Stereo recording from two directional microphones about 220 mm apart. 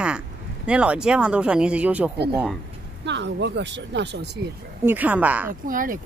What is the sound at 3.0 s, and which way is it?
Speech, 50° right (ahead or behind).